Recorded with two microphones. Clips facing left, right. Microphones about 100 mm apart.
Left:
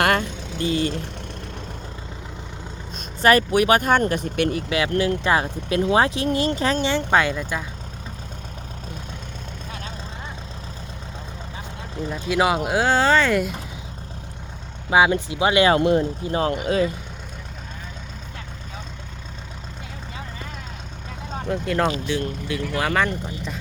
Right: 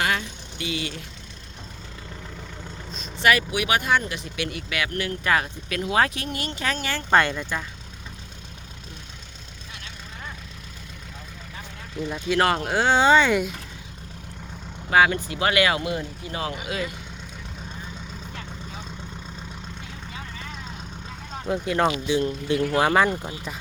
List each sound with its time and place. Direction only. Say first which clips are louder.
0.0 s speech: left 6 dB; 55° left (ahead or behind)
2.9 s speech: left 4 dB; 40° left (ahead or behind)
4.5 s speech: left 7 dB; 30° left (ahead or behind)
7.1 s speech: right 4 dB; 5° left (ahead or behind)
12.1 s speech: left 1 dB; 5° left (ahead or behind)
14.8 s speech: left 2 dB; 15° left (ahead or behind)
15.8 s speech: left 10 dB; 45° left (ahead or behind)
21.4 s speech: even; 5° right (ahead or behind)
22.0 s speech: right 2 dB; 15° right (ahead or behind)